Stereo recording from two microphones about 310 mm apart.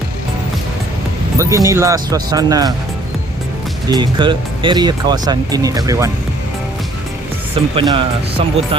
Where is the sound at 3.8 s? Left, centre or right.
Centre.